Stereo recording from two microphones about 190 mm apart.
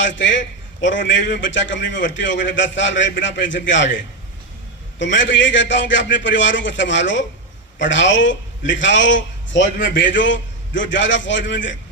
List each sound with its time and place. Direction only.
0.0 s a man's voice: 75° left (ahead or behind)